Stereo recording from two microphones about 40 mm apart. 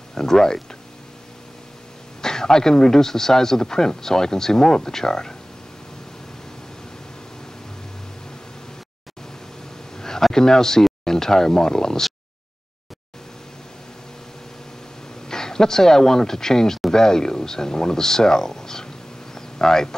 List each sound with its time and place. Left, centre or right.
0.1 s speech: centre
2.2 s speech: centre
9.9 s a sound: centre
10.3 s speech: centre
15.2 s speech: centre